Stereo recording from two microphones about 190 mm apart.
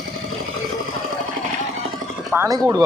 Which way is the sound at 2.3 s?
15° right (ahead or behind).